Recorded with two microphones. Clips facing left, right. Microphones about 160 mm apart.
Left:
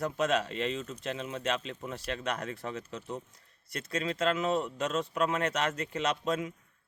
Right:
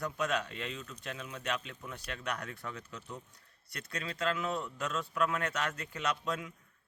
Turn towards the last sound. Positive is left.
turn(degrees=20)  # may be behind; listen again after turning